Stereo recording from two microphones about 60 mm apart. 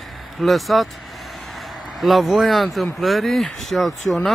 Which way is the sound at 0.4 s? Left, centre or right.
Centre.